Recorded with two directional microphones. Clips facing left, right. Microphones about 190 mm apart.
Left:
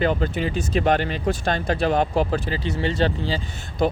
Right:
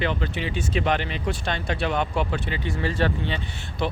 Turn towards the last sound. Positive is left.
turn(degrees=40)  # may be behind; listen again after turning